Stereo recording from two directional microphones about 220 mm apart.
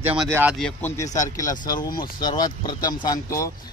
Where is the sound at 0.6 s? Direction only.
5° left (ahead or behind).